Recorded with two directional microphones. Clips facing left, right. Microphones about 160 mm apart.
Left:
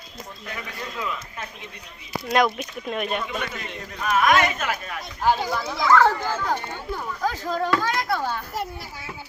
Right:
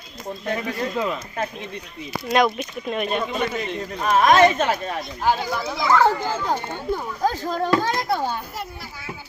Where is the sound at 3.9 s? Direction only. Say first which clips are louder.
Right 4 dB; 35° right (ahead or behind).